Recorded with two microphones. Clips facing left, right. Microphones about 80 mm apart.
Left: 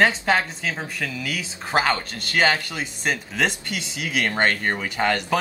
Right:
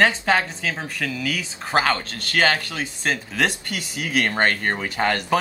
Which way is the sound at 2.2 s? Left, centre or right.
Centre.